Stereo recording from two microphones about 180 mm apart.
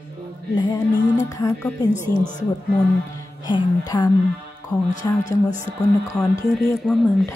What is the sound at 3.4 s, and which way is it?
Speech, 25° left (ahead or behind).